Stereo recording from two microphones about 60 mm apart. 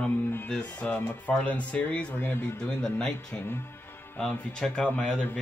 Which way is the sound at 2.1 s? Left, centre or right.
Left.